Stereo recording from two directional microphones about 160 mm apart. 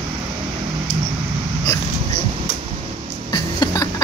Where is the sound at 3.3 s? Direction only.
25° left (ahead or behind).